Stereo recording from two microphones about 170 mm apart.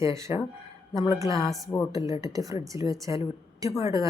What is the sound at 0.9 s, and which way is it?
Speech, 30° left (ahead or behind).